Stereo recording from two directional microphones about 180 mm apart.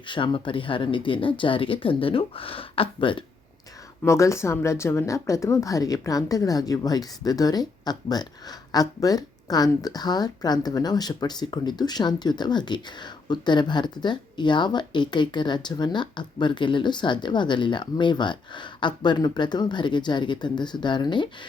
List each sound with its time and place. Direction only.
0.1 s speech: 25° left (ahead or behind)
4.0 s speech: 15° left (ahead or behind)